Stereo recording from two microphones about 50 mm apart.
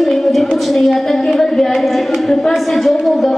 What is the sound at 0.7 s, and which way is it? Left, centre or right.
A woman's voice, centre.